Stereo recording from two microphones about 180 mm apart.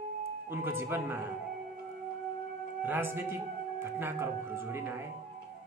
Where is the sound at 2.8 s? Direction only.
10° right (ahead or behind).